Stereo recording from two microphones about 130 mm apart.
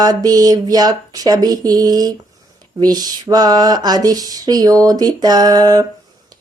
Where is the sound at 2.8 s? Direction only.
30° right (ahead or behind).